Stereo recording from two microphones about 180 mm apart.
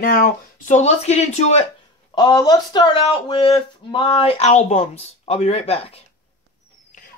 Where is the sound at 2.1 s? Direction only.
25° left (ahead or behind).